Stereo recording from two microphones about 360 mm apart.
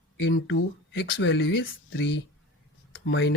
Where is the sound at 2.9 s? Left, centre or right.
Left.